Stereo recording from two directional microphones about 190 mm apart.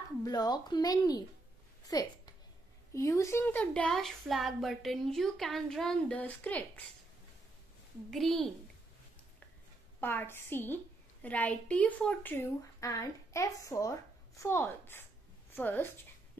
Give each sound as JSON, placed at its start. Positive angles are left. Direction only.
{"t": 0.2, "sound": "a woman's voice", "side_deg": 20}
{"t": 8.1, "sound": "a woman's voice", "side_deg": 0}
{"t": 9.9, "sound": "a woman's voice", "side_deg": 10}